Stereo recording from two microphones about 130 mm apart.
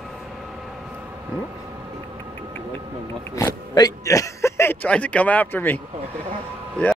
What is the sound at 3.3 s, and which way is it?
Speech, 25° left (ahead or behind).